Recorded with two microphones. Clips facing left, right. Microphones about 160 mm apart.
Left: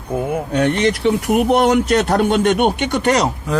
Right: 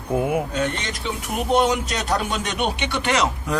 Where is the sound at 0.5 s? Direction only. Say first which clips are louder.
Left 9 dB; 70° left (ahead or behind); by 3.2 s 40° left (ahead or behind).